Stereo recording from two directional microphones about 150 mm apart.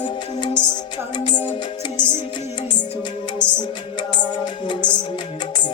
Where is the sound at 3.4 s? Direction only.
30° left (ahead or behind).